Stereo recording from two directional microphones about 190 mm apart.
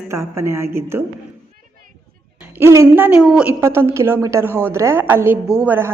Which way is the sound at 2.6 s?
15° right (ahead or behind).